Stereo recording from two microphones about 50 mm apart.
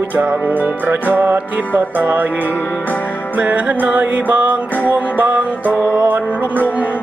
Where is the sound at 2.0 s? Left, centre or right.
Right.